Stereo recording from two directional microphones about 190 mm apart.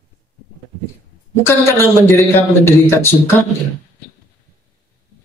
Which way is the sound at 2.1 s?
15° left (ahead or behind).